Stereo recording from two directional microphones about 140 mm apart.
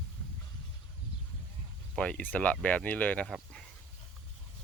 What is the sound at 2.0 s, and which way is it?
Speech, 10° left (ahead or behind).